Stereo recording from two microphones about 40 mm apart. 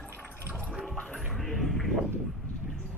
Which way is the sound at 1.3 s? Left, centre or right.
Centre.